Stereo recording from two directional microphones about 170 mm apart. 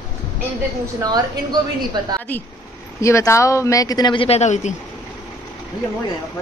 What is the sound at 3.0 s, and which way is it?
A man's voice, 15° left (ahead or behind).